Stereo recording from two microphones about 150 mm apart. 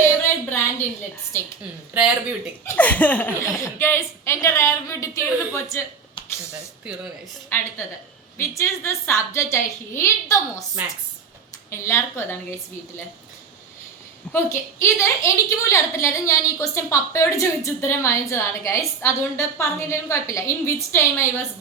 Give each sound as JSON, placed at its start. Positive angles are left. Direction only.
{"t": 0.0, "sound": "a sound", "side_deg": 15}
{"t": 1.3, "sound": "speech", "side_deg": 15}
{"t": 1.9, "sound": "speech", "side_deg": -10}
{"t": 2.6, "sound": "speech", "side_deg": 10}
{"t": 6.5, "sound": "speech", "side_deg": -5}
{"t": 8.4, "sound": "speech", "side_deg": 20}
{"t": 11.7, "sound": "speech", "side_deg": 15}
{"t": 14.3, "sound": "a woman's voice", "side_deg": 20}